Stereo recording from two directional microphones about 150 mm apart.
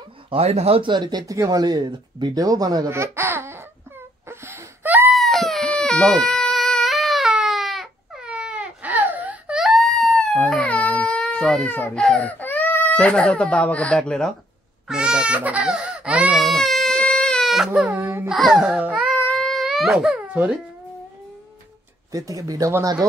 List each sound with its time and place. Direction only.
0.3 s speech: 45° right (ahead or behind); by 3.6 s 15° right (ahead or behind)
4.3 s wail: 15° right (ahead or behind)
5.1 s baby cry: centre (ahead or behind)
14.9 s speech: 5° right (ahead or behind)
17.9 s a child's voice: 15° right (ahead or behind)
18.3 s speech: centre (ahead or behind)
19.2 s a sound: centre (ahead or behind)
22.1 s speech: 20° right (ahead or behind)